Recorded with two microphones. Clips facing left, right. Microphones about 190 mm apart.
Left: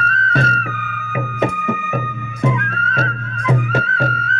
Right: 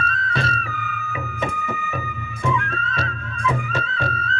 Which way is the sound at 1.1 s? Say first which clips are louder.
Left 9 dB; 65° left (ahead or behind).